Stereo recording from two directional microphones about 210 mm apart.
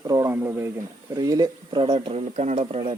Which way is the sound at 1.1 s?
15° right (ahead or behind).